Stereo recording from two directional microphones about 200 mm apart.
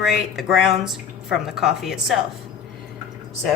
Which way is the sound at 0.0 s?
Centre (ahead or behind).